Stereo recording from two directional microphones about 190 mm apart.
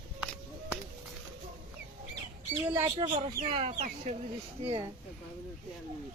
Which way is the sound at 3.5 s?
35° right (ahead or behind).